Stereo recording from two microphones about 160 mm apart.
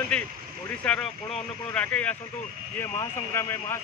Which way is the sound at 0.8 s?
5° left (ahead or behind).